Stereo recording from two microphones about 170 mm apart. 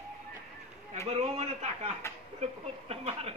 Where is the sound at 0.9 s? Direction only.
40° right (ahead or behind).